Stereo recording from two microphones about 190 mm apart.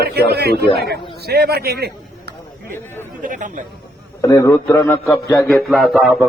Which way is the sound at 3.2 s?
45° right (ahead or behind).